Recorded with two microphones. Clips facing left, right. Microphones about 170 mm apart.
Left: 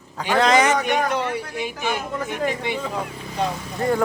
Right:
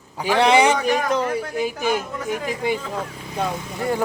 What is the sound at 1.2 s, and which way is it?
A woman's voice, 40° right (ahead or behind).